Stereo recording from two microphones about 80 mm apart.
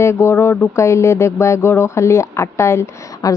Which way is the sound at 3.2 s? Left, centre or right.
Left.